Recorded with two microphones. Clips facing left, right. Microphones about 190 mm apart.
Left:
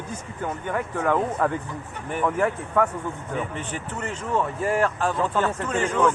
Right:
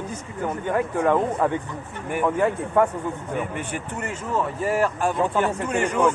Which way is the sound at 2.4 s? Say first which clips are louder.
Right 3 dB; 25° right (ahead or behind).